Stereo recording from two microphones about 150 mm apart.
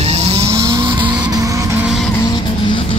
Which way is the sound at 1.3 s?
20° right (ahead or behind).